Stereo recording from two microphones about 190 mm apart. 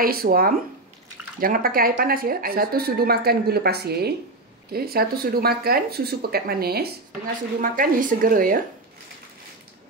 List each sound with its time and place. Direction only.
0.0 s a woman's voice: 50° right (ahead or behind)